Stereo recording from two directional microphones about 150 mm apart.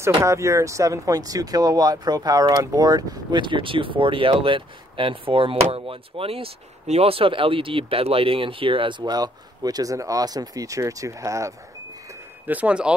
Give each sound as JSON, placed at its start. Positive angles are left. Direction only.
{"t": 0.2, "sound": "speech", "side_deg": -20}
{"t": 12.4, "sound": "speech", "side_deg": -10}